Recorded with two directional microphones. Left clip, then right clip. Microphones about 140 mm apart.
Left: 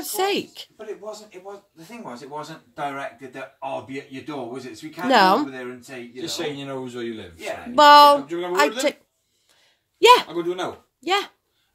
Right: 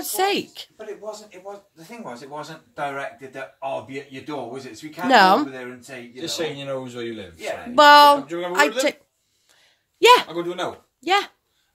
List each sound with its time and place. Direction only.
0.0 s speech: 10° right (ahead or behind)
2.0 s speech: 20° right (ahead or behind)
5.0 s speech: 10° right (ahead or behind)
5.5 s speech: 30° right (ahead or behind)
7.7 s speech: 10° right (ahead or behind)
9.9 s speech: 10° right (ahead or behind)
10.3 s speech: 35° right (ahead or behind)
11.0 s speech: 10° right (ahead or behind)